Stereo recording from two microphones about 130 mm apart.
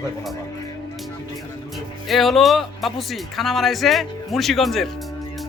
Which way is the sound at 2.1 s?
Centre (ahead or behind).